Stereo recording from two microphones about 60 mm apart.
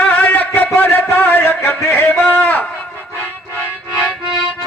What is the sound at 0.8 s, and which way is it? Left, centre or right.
Speech, left.